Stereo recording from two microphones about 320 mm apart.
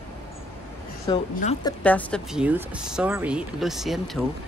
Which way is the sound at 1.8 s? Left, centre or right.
Centre.